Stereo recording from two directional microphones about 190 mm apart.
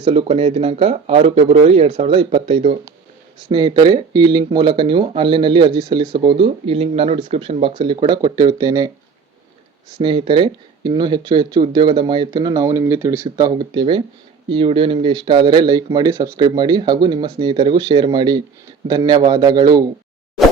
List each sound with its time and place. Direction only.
0.0 s speech: 30° right (ahead or behind)
10.0 s speech: 25° right (ahead or behind)